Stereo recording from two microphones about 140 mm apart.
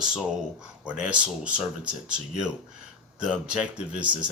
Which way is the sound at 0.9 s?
10° right (ahead or behind).